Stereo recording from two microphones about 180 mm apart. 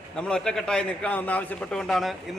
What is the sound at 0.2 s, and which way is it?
A man's voice, 5° left (ahead or behind).